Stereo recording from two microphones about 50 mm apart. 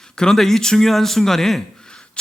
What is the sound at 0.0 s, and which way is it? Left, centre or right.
A man's voice, centre.